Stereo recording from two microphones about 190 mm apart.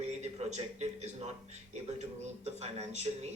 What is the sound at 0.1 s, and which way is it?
Speech, 35° right (ahead or behind).